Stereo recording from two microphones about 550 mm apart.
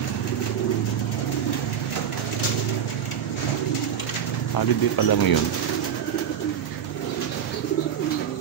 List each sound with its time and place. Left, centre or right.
4.6 s speech: left